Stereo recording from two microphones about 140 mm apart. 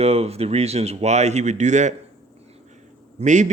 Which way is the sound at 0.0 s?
45° right (ahead or behind).